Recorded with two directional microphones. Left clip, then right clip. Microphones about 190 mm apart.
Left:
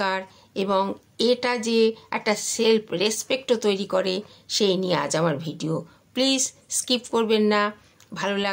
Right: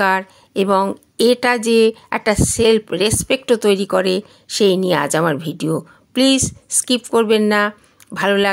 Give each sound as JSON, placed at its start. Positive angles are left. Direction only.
{"t": 0.0, "sound": "a woman's voice", "side_deg": -40}